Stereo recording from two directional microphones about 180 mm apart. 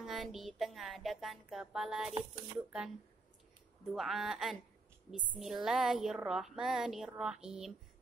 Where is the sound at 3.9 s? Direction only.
Centre (ahead or behind).